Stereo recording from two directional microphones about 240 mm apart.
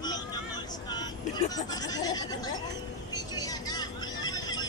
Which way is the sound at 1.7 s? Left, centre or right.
Centre.